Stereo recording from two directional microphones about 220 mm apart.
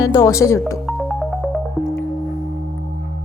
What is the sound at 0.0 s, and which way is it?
Speech, 15° left (ahead or behind).